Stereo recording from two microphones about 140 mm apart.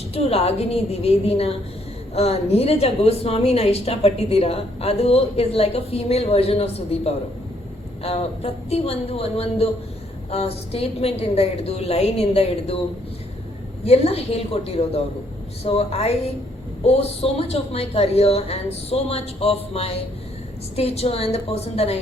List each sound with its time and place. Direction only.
0.1 s a woman's voice: 45° left (ahead or behind)
13.8 s a woman's voice: 45° left (ahead or behind)